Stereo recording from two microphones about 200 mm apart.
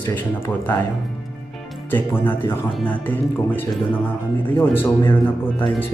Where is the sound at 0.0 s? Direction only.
10° left (ahead or behind).